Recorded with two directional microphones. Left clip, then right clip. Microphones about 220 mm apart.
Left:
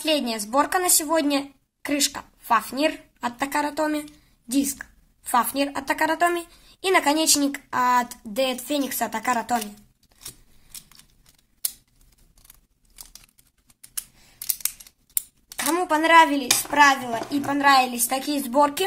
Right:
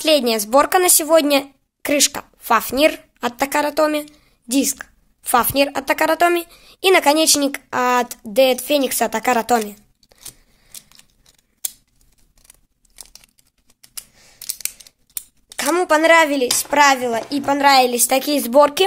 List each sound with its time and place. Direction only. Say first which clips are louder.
0.0 s a woman's voice: right 8 dB; 45° right (ahead or behind)
15.5 s a woman's voice: right 6 dB; 50° right (ahead or behind)